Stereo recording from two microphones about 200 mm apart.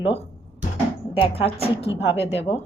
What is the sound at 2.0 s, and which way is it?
Speech, 65° left (ahead or behind).